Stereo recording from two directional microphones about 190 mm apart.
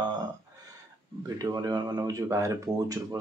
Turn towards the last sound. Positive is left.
turn(degrees=-15)  # may be behind; listen again after turning